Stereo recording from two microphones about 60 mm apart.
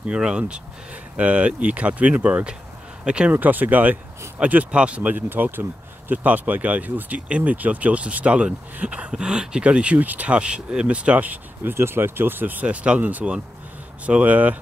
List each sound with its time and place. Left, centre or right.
0.0 s speech: centre
3.3 s speech: right
11.7 s speech: right